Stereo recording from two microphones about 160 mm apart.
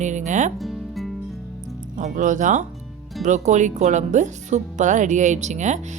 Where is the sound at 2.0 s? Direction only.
55° right (ahead or behind).